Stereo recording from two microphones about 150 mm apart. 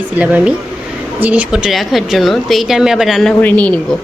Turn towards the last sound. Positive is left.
turn(degrees=10)  # may be behind; listen again after turning